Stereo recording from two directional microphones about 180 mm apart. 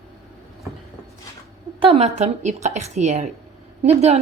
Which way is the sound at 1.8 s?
35° right (ahead or behind).